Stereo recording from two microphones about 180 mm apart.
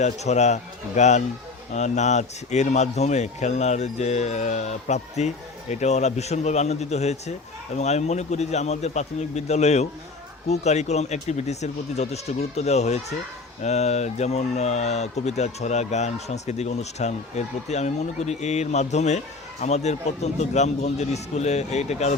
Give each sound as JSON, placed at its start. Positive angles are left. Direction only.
{"t": 0.0, "sound": "a man's voice", "side_deg": 40}